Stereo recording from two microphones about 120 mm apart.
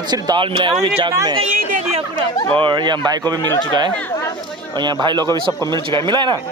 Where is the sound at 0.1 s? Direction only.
40° right (ahead or behind).